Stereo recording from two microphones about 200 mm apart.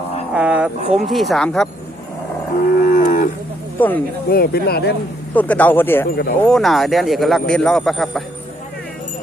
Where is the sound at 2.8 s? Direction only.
40° left (ahead or behind).